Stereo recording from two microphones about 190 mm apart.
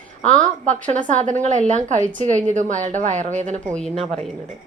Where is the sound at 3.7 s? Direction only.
5° left (ahead or behind).